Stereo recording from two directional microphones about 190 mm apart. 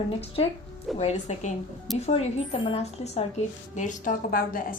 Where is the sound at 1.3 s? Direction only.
40° left (ahead or behind).